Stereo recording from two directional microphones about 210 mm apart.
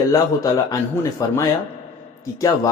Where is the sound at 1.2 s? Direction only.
15° left (ahead or behind).